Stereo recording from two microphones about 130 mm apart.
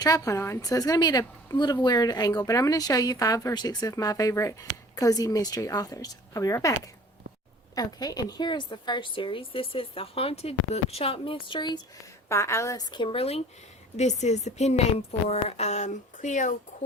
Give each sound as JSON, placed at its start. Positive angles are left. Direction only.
{"t": 0.0, "sound": "a woman's voice", "side_deg": 30}
{"t": 7.8, "sound": "a woman's voice", "side_deg": 30}
{"t": 12.3, "sound": "a woman's voice", "side_deg": 20}
{"t": 13.9, "sound": "a woman's voice", "side_deg": 60}